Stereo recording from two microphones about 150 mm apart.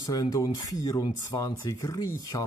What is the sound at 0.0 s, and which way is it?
Speech, 25° left (ahead or behind).